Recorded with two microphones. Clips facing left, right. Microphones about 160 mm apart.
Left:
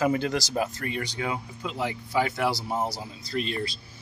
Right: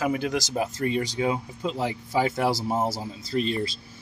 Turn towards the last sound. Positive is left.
turn(degrees=-30)  # may be behind; listen again after turning